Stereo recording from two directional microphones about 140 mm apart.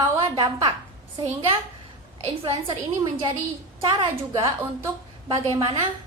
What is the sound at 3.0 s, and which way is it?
A woman's voice, 30° right (ahead or behind).